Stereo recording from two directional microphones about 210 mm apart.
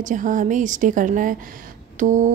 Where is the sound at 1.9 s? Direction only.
35° right (ahead or behind).